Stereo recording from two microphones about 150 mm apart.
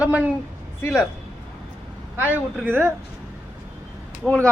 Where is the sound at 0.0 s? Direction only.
10° right (ahead or behind).